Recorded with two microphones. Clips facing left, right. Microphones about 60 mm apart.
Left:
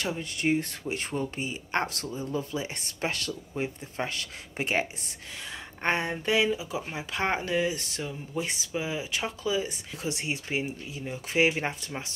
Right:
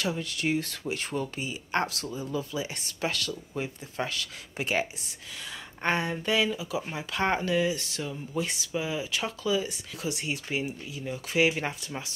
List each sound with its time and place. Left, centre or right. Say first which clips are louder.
0.0 s speech: even; left